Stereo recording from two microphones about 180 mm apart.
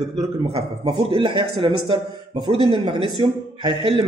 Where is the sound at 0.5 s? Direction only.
30° right (ahead or behind).